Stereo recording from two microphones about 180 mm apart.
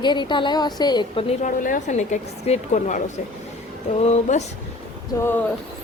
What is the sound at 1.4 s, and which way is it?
Speech, 45° left (ahead or behind).